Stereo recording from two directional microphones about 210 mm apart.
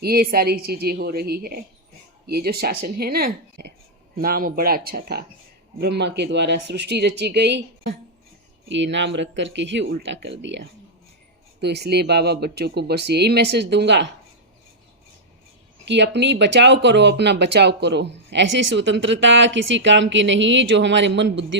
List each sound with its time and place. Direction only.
0.0 s speech: 45° right (ahead or behind)
8.7 s speech: 60° right (ahead or behind)
15.9 s speech: 55° right (ahead or behind)